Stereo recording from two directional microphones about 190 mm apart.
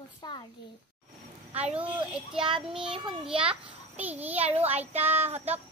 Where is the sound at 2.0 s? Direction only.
5° right (ahead or behind).